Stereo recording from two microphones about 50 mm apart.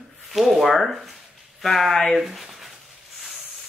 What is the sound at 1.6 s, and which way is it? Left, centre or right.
Speech, centre.